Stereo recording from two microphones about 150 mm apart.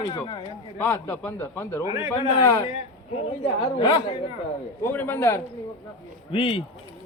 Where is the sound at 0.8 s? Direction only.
15° left (ahead or behind).